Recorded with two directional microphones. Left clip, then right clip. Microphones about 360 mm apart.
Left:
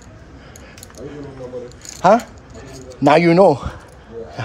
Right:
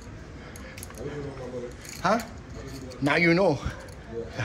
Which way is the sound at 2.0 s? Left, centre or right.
Centre.